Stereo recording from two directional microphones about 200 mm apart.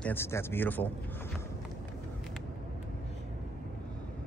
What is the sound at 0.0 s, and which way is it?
Speech, 10° left (ahead or behind).